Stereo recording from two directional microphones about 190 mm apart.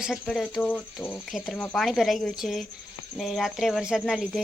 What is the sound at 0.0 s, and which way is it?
Speech, centre (ahead or behind).